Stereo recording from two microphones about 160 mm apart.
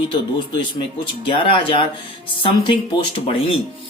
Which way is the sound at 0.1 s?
30° left (ahead or behind).